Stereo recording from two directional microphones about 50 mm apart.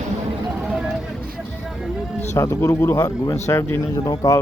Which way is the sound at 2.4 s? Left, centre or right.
Left.